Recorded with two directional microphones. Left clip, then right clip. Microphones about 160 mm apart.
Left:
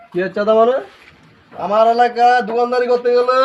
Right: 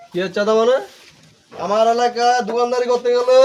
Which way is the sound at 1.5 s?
20° right (ahead or behind).